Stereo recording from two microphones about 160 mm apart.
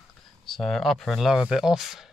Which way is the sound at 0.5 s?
Centre (ahead or behind).